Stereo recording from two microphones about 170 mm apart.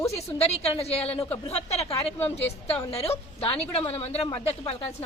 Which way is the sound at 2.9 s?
35° left (ahead or behind).